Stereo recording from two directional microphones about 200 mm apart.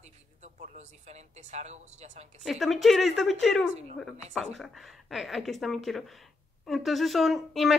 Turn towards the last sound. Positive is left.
turn(degrees=0)  # may be behind; listen again after turning